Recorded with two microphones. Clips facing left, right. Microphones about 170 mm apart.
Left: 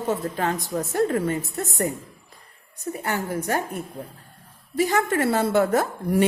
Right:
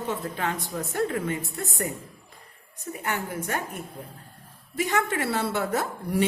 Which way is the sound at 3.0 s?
35° left (ahead or behind).